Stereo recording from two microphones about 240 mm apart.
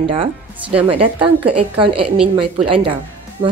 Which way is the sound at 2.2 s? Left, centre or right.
Right.